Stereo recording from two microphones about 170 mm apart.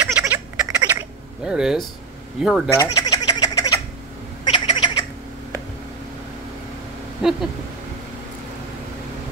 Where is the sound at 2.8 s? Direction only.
20° left (ahead or behind).